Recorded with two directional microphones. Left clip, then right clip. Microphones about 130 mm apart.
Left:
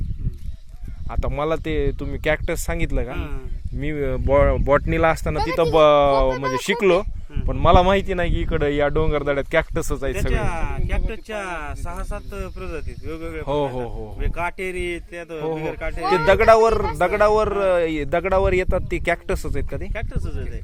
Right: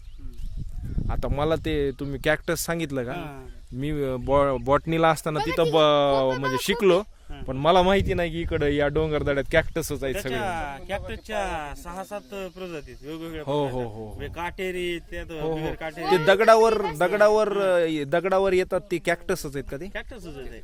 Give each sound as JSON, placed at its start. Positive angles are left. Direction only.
{"t": 1.0, "sound": "speech", "side_deg": -45}
{"t": 3.1, "sound": "speech", "side_deg": -45}
{"t": 3.9, "sound": "a man's voice", "side_deg": -20}
{"t": 9.7, "sound": "speech", "side_deg": -15}
{"t": 10.2, "sound": "a man's voice", "side_deg": -30}